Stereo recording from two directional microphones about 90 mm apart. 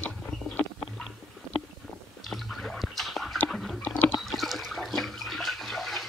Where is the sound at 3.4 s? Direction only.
Centre (ahead or behind).